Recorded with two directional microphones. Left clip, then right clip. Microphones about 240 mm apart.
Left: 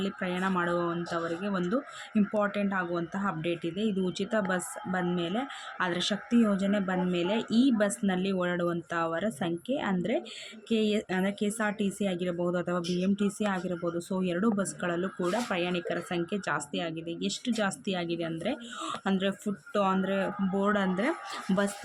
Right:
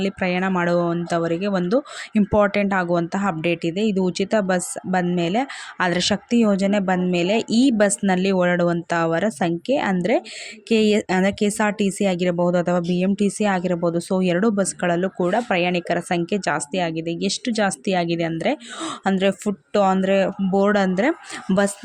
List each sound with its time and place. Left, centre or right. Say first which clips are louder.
0.0 s speech: right 9 dB; right